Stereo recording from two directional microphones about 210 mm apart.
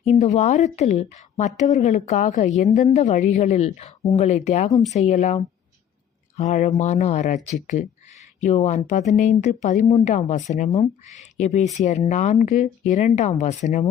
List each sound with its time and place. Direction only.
0.0 s a woman's voice: 35° left (ahead or behind)